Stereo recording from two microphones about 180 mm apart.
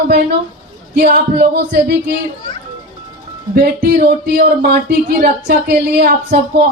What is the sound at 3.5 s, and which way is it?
Speech, 55° right (ahead or behind).